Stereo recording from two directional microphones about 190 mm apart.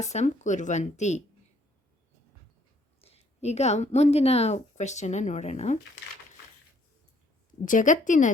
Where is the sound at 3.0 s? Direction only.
35° left (ahead or behind).